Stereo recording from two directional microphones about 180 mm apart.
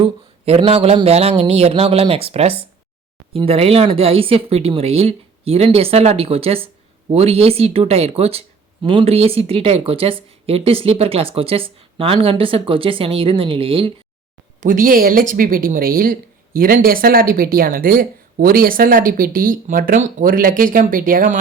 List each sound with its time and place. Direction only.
0.0 s speech: 30° right (ahead or behind)
14.6 s speech: 45° right (ahead or behind)